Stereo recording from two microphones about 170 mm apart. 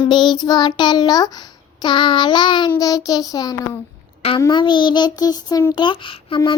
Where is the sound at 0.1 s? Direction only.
25° left (ahead or behind).